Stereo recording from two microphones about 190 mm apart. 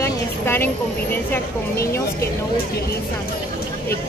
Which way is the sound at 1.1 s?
10° left (ahead or behind).